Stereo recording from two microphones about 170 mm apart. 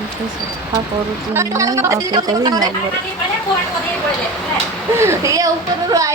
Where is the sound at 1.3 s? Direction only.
15° right (ahead or behind).